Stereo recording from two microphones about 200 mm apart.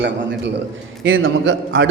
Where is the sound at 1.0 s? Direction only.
75° right (ahead or behind).